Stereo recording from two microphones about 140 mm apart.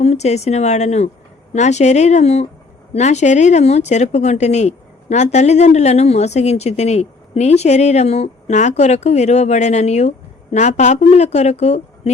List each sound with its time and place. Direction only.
0.0 s speech: 50° left (ahead or behind)